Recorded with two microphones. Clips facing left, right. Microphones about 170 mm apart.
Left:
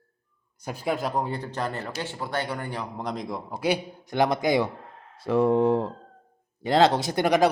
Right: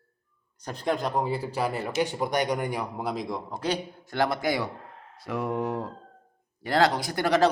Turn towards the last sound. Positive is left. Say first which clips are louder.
# left 2 dB
turn(degrees=15)  # may be behind; listen again after turning